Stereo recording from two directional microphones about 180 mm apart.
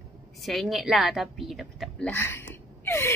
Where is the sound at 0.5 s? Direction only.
Centre (ahead or behind).